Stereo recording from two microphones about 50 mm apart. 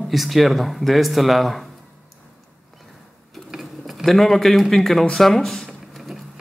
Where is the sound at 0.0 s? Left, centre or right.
Centre.